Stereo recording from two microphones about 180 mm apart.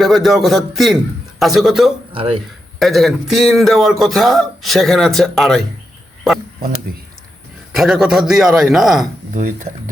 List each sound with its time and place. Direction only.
0.0 s a man's voice: centre (ahead or behind)
2.1 s speech: 30° right (ahead or behind)
2.7 s a man's voice: centre (ahead or behind)
6.9 s a sound: 55° right (ahead or behind)
7.8 s a man's voice: centre (ahead or behind)
9.3 s speech: 50° right (ahead or behind)